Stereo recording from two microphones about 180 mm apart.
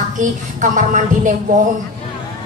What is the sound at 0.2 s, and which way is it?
Speech, 45° right (ahead or behind).